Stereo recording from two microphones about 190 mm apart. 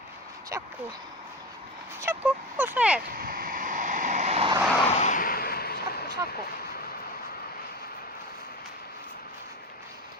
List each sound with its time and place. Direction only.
0.5 s speech: 15° right (ahead or behind)
2.0 s speech: 10° right (ahead or behind)
3.1 s vehicle: 50° right (ahead or behind); by 4.5 s 35° right (ahead or behind)
4.9 s artillery fire: 40° left (ahead or behind); by 6.1 s 55° left (ahead or behind)